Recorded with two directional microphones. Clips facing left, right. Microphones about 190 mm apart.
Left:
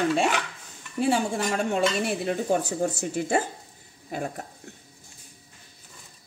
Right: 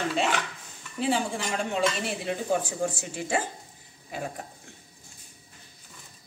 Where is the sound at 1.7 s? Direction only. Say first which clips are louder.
Left 3 dB; 45° left (ahead or behind).